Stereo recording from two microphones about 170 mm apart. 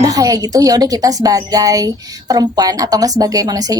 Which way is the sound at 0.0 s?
20° right (ahead or behind).